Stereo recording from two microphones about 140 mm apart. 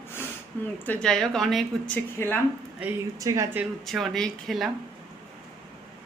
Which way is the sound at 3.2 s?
20° right (ahead or behind).